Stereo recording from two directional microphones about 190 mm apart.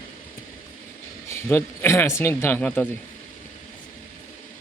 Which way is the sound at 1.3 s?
10° left (ahead or behind).